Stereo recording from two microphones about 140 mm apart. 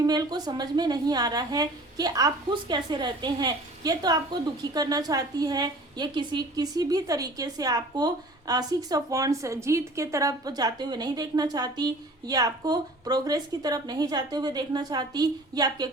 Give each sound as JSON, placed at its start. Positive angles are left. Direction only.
{"t": 0.0, "sound": "a woman's voice", "side_deg": -25}